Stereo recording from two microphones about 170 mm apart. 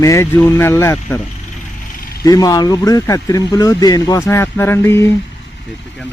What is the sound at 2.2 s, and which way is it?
Speech, 20° left (ahead or behind).